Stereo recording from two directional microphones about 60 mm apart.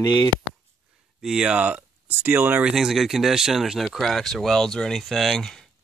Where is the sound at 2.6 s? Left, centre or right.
Centre.